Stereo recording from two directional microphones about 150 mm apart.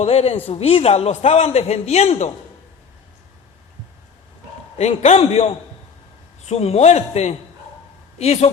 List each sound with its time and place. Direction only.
0.0 s a man's voice: 40° left (ahead or behind)
4.8 s a man's voice: 45° left (ahead or behind)